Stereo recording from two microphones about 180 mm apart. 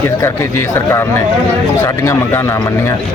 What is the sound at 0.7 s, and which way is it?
A man's voice, 15° left (ahead or behind).